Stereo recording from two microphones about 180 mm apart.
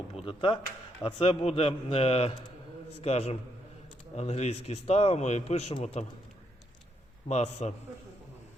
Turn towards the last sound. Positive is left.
turn(degrees=35)  # may be behind; listen again after turning